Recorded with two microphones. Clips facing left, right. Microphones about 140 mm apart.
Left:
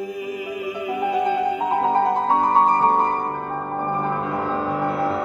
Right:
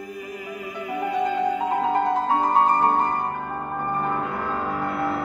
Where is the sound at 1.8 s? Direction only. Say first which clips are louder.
Left 5 dB; 35° left (ahead or behind).